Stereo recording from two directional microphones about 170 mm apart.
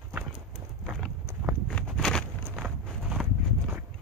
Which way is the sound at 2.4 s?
10° right (ahead or behind).